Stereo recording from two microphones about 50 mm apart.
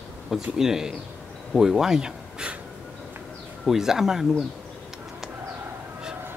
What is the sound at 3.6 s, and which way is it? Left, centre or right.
Speech, centre.